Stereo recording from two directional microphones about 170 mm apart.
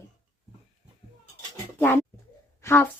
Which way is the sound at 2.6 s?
15° left (ahead or behind).